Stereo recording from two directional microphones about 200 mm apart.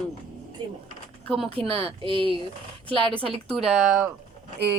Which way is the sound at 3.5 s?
Centre (ahead or behind).